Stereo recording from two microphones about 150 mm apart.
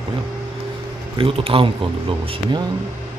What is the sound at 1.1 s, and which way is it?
Speech, 35° right (ahead or behind).